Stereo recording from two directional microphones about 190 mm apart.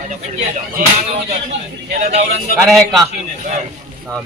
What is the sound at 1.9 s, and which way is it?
Speech, 35° right (ahead or behind).